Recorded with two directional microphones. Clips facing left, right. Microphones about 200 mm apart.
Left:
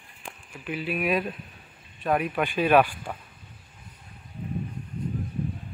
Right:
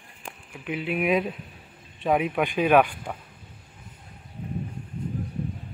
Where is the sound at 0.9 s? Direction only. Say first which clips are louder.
Right 3 dB; 20° right (ahead or behind).